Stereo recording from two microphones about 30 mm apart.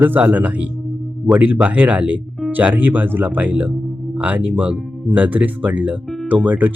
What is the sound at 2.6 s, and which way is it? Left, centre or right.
Speech, right.